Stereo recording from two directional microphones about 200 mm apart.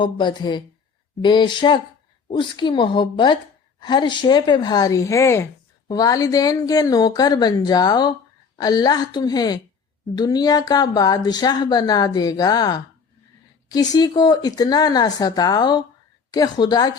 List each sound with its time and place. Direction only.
0.0 s speech: 25° left (ahead or behind)